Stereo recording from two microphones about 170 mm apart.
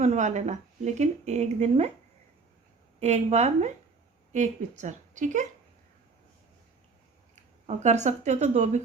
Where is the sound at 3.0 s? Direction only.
40° right (ahead or behind).